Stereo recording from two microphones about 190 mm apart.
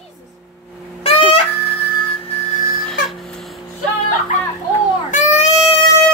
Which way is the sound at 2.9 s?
Centre (ahead or behind).